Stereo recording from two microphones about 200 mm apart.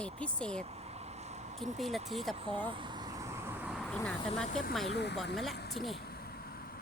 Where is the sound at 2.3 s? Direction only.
25° right (ahead or behind).